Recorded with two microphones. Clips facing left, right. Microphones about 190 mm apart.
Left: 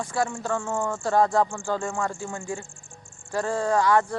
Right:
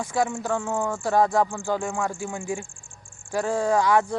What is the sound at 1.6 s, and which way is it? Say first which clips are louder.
Speech: right 1 dB; 15° right (ahead or behind).